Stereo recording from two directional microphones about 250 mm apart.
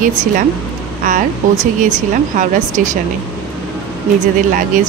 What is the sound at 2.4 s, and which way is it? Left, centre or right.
Speech, right.